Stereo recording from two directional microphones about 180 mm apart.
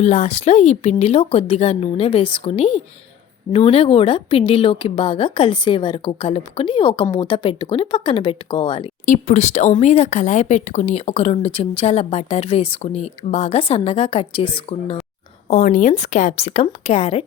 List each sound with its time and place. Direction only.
0.0 s a woman's voice: 35° left (ahead or behind)
9.0 s speech: 40° left (ahead or behind)
15.4 s speech: 45° left (ahead or behind)